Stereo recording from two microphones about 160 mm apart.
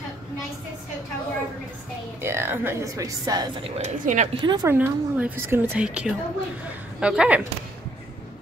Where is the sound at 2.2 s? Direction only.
15° right (ahead or behind).